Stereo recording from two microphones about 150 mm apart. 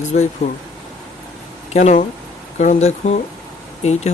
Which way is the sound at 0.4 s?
50° left (ahead or behind).